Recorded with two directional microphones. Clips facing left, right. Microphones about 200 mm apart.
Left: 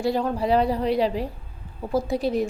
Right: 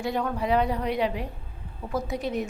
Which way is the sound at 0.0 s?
30° left (ahead or behind).